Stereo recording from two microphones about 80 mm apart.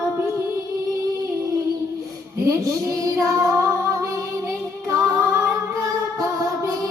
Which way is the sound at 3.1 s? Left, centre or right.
Right.